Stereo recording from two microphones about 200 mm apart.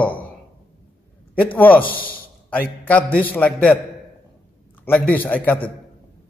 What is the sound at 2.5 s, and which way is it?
A man's voice, 10° left (ahead or behind).